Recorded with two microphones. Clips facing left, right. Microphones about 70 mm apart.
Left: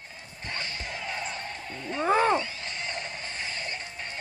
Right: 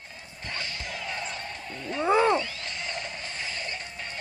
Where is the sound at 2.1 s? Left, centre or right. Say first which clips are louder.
Right 1 dB; left.